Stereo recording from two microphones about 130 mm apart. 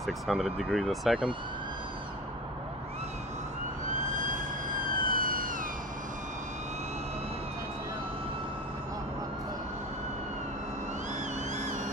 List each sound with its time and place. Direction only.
0.0 s speech: centre (ahead or behind)
4.2 s emergency vehicle: 85° right